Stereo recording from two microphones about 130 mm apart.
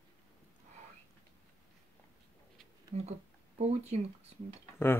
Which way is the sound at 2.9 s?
60° right (ahead or behind).